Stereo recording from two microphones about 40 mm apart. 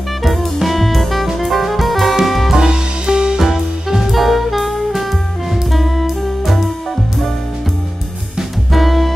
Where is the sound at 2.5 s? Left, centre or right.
Centre.